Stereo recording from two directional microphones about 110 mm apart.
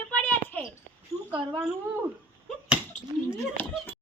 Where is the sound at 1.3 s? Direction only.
50° right (ahead or behind).